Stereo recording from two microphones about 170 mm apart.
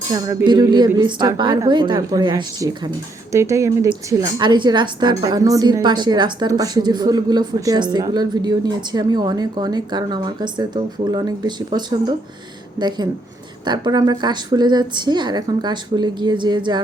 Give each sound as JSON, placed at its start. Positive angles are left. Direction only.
{"t": 0.1, "sound": "a woman's voice", "side_deg": -20}
{"t": 13.7, "sound": "a woman's voice", "side_deg": -25}